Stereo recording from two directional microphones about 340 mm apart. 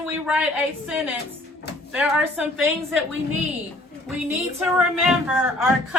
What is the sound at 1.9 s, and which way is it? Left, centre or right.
Speech, centre.